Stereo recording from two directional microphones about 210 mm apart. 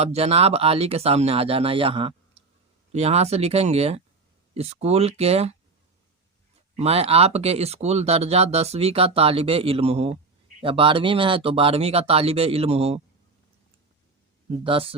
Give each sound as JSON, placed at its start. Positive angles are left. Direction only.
{"t": 0.0, "sound": "speech", "side_deg": -30}
{"t": 6.7, "sound": "speech", "side_deg": -30}
{"t": 14.6, "sound": "speech", "side_deg": -25}